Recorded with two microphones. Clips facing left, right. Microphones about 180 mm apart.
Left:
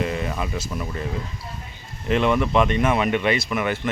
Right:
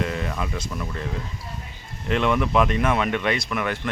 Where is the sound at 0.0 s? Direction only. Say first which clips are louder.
Left 2 dB; 5° left (ahead or behind).